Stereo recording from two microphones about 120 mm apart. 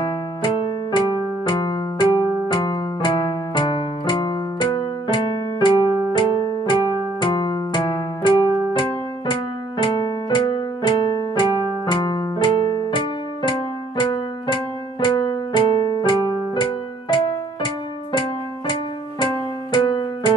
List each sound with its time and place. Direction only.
0.0 s electric piano: 45° left (ahead or behind)
6.1 s keyboard: 40° left (ahead or behind)
11.9 s music: 40° left (ahead or behind)
14.5 s keyboard: 40° left (ahead or behind)
19.7 s music: 40° left (ahead or behind)